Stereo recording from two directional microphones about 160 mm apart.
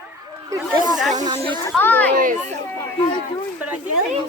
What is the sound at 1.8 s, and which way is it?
Chatter, 10° left (ahead or behind).